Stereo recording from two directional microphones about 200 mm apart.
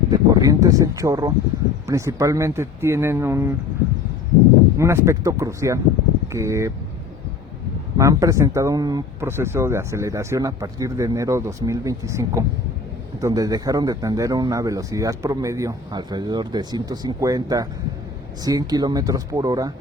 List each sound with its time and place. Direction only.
0.1 s speech: 20° right (ahead or behind)
4.8 s speech: 15° right (ahead or behind)
7.9 s speech: 15° right (ahead or behind)